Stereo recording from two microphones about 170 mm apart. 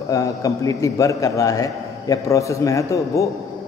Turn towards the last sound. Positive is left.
turn(degrees=20)  # may be behind; listen again after turning